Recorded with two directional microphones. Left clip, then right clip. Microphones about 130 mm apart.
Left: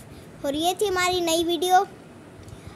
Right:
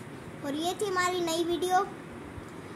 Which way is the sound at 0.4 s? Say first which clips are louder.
Left 8 dB; 90° left.